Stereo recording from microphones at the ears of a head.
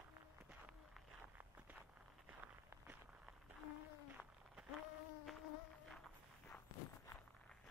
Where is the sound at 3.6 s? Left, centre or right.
Left.